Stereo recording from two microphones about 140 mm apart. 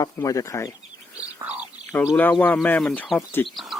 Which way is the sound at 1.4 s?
10° right (ahead or behind).